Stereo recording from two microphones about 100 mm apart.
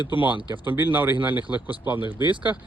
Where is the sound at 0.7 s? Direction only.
20° right (ahead or behind).